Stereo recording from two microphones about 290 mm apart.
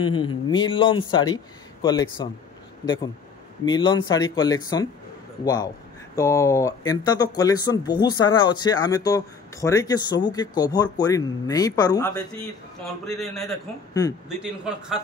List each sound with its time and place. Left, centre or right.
0.1 s speech: centre
12.8 s a man's voice: centre